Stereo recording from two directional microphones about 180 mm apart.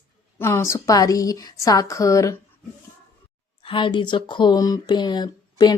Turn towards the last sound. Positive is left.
turn(degrees=25)  # may be behind; listen again after turning